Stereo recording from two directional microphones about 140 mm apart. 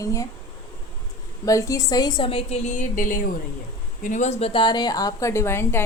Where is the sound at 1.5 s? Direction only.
25° left (ahead or behind); by 3.2 s 70° left (ahead or behind).